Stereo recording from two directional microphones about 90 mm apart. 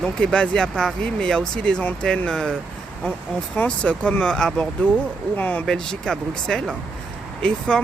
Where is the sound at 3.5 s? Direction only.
15° left (ahead or behind).